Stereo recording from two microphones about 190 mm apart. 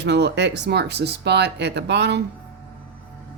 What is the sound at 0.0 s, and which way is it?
Speech, 65° right (ahead or behind).